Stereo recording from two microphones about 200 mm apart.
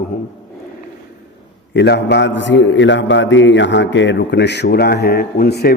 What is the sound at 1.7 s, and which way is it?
A man's voice, 55° left (ahead or behind).